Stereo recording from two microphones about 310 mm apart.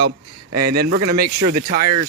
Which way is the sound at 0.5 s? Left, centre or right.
Right.